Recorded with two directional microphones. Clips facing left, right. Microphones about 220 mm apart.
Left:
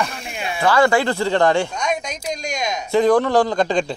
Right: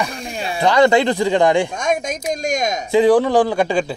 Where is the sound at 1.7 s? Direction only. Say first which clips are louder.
Right 3 dB; 50° right (ahead or behind).